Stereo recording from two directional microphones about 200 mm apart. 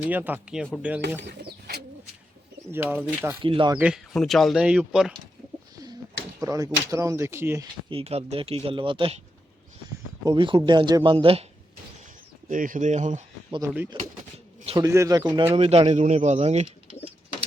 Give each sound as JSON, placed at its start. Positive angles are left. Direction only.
{"t": 0.0, "sound": "speech", "side_deg": -10}
{"t": 1.3, "sound": "bird", "side_deg": -55}
{"t": 2.7, "sound": "speech", "side_deg": -10}
{"t": 3.4, "sound": "speech", "side_deg": -25}
{"t": 3.8, "sound": "speech", "side_deg": -5}
{"t": 5.7, "sound": "bird", "side_deg": -20}
{"t": 6.4, "sound": "a sound", "side_deg": -15}
{"t": 6.7, "sound": "speech", "side_deg": -15}
{"t": 7.9, "sound": "speech", "side_deg": -30}
{"t": 10.2, "sound": "speech", "side_deg": -25}
{"t": 12.5, "sound": "speech", "side_deg": -40}
{"t": 13.9, "sound": "bird", "side_deg": -25}
{"t": 14.6, "sound": "a sound", "side_deg": -30}
{"t": 14.8, "sound": "speech", "side_deg": -15}